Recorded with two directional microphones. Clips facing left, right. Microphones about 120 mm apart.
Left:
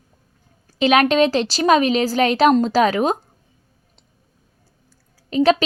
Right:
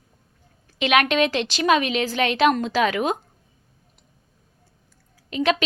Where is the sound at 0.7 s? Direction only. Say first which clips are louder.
Left 5 dB; 35° left (ahead or behind).